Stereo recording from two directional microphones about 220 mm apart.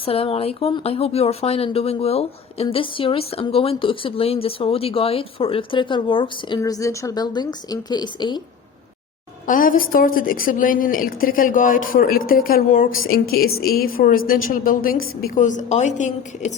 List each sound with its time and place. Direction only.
0.0 s a woman's voice: 25° left (ahead or behind)
9.5 s a woman's voice: 40° left (ahead or behind)